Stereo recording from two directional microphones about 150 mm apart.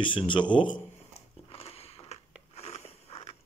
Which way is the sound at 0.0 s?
35° left (ahead or behind).